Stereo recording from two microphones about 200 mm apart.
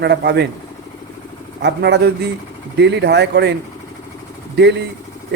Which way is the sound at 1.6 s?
55° right (ahead or behind).